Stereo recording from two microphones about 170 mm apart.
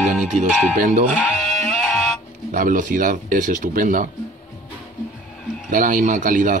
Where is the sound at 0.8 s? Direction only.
50° right (ahead or behind).